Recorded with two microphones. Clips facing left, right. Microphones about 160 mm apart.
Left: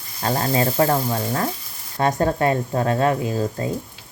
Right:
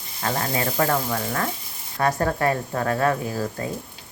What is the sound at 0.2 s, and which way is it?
Speech, 30° left (ahead or behind).